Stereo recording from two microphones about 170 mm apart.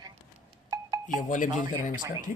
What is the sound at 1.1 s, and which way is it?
Speech, 50° left (ahead or behind).